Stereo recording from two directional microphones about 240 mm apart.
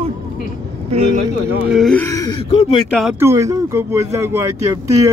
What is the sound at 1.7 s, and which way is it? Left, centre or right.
Speech, centre.